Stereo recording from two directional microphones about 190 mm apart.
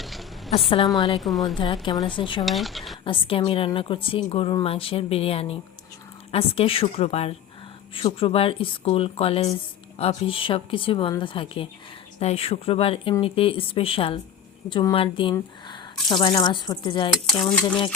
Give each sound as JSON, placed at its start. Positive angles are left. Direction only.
{"t": 0.0, "sound": "a sound", "side_deg": 0}
{"t": 0.9, "sound": "a woman's voice", "side_deg": 25}
{"t": 1.2, "sound": "speech", "side_deg": 0}
{"t": 1.5, "sound": "a woman's voice", "side_deg": 25}
{"t": 2.4, "sound": "speech", "side_deg": 0}
{"t": 3.0, "sound": "a woman's voice", "side_deg": 25}
{"t": 17.4, "sound": "speech", "side_deg": 5}